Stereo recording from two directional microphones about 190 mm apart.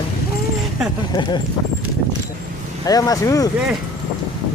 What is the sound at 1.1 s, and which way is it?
Speech, 25° left (ahead or behind).